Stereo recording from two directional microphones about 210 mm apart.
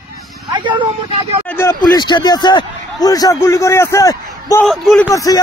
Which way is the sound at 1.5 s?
15° left (ahead or behind).